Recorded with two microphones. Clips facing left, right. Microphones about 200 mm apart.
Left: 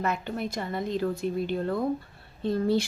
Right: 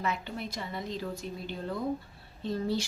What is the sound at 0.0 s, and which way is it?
A woman's voice, 50° left (ahead or behind).